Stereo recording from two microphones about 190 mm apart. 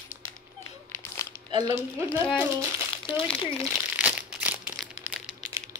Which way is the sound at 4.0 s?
5° right (ahead or behind).